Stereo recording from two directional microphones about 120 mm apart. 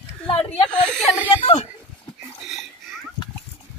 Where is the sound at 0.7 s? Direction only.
10° left (ahead or behind).